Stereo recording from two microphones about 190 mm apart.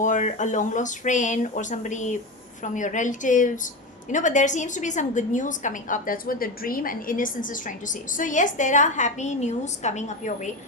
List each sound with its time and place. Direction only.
0.0 s a woman's voice: 40° left (ahead or behind)